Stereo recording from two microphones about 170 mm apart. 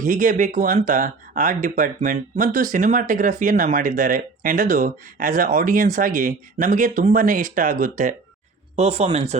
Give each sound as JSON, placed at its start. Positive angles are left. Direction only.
{"t": 0.0, "sound": "speech", "side_deg": -50}
{"t": 8.7, "sound": "speech", "side_deg": -40}